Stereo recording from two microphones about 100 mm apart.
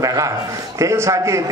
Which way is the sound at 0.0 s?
35° right (ahead or behind).